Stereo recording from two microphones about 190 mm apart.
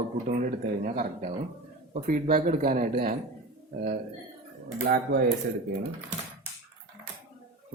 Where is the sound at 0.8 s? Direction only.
40° right (ahead or behind).